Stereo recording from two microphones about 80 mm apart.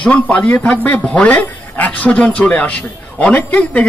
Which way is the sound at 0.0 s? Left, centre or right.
Centre.